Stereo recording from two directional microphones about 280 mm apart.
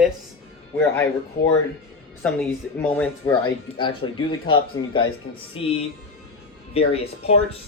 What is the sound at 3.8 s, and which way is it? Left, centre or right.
Speech, centre.